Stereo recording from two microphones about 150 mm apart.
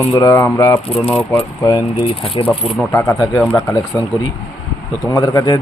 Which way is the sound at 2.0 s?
40° left (ahead or behind).